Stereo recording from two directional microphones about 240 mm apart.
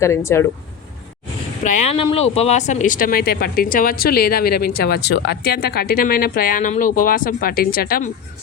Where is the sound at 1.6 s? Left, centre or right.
Left.